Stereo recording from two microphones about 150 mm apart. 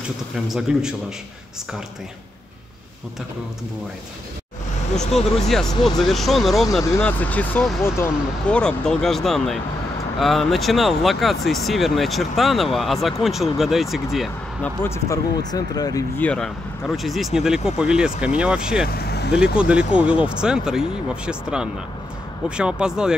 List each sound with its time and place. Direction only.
0.5 s speech: 5° right (ahead or behind)
5.5 s speech: 5° left (ahead or behind)
14.6 s speech: 20° left (ahead or behind)
16.2 s speech: 5° left (ahead or behind)
18.9 s speech: 90° left
19.3 s speech: 5° right (ahead or behind)